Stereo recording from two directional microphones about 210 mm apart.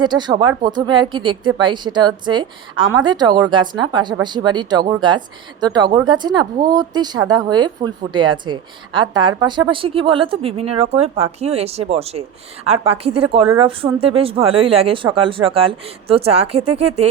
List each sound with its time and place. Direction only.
0.0 s a woman's voice: 20° right (ahead or behind)